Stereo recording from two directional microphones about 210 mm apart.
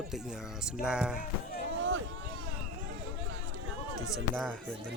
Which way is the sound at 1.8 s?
65° right (ahead or behind).